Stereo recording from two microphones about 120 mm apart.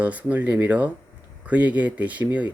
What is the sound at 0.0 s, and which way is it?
Speech, 10° right (ahead or behind).